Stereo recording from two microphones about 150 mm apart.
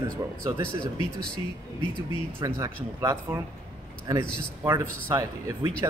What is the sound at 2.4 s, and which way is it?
Speech, 25° right (ahead or behind).